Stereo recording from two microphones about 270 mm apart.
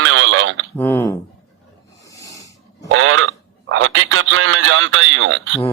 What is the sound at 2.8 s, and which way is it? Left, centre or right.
Speech, right.